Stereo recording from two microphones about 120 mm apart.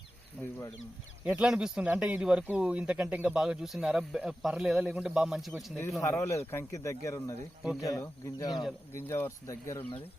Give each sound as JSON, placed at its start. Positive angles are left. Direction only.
{"t": 0.4, "sound": "speech", "side_deg": 0}
{"t": 6.0, "sound": "speech", "side_deg": 25}
{"t": 8.9, "sound": "speech", "side_deg": 20}